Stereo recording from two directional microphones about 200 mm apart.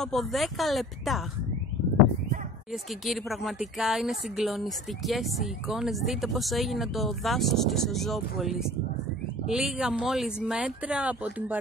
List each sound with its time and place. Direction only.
0.0 s speech: centre (ahead or behind)
2.7 s speech: centre (ahead or behind)